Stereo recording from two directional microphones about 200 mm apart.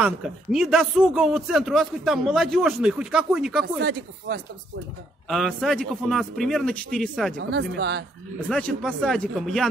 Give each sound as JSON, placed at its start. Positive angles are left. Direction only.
{"t": 0.0, "sound": "a man's voice", "side_deg": -5}
{"t": 5.3, "sound": "a man's voice", "side_deg": 0}
{"t": 7.3, "sound": "speech", "side_deg": -55}
{"t": 8.5, "sound": "a man's voice", "side_deg": 5}